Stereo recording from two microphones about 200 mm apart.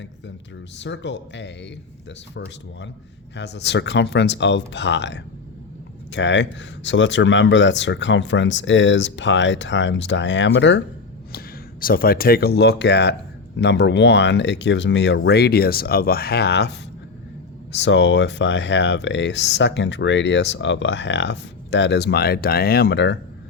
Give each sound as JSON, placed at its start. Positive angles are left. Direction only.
{"t": 0.8, "sound": "speech", "side_deg": 60}
{"t": 3.3, "sound": "speech", "side_deg": 60}
{"t": 11.3, "sound": "speech", "side_deg": 50}